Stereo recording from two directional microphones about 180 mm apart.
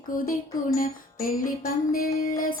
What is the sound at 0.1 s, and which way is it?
Music, 50° left (ahead or behind).